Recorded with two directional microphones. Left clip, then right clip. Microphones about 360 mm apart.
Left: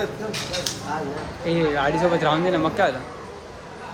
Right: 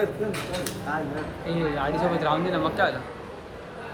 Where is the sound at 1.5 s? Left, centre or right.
Left.